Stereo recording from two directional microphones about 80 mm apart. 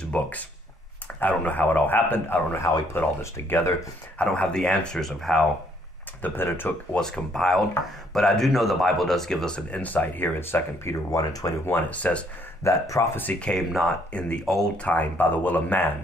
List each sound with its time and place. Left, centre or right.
0.0 s speech: centre
4.2 s speech: centre
6.2 s speech: left
7.0 s speech: centre; by 11.0 s left
11.1 s speech: left
11.9 s speech: centre
12.6 s speech: left
13.2 s speech: centre
14.8 s speech: centre